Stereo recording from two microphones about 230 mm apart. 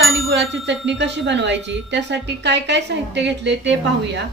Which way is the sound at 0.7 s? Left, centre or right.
Right.